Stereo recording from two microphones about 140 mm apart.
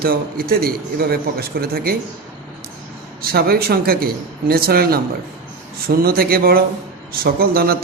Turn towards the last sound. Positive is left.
turn(degrees=-90)